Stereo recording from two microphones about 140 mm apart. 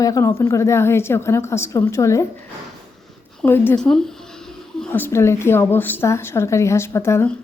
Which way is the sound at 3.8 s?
5° left (ahead or behind).